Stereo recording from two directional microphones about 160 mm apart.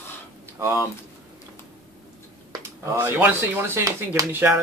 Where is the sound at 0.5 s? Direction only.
15° right (ahead or behind).